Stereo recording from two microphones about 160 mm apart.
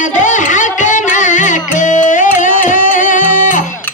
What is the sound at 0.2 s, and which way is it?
Music, 50° left (ahead or behind).